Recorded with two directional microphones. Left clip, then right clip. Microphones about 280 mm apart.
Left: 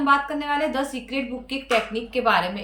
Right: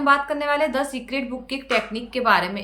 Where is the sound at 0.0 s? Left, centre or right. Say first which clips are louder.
Right 2 dB; centre.